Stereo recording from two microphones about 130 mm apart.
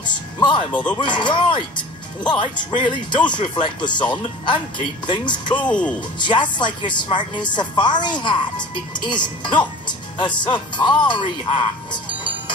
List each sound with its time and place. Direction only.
0.0 s speech: 35° left (ahead or behind)
5.7 s speech: 10° left (ahead or behind)
5.9 s speech: 35° left (ahead or behind)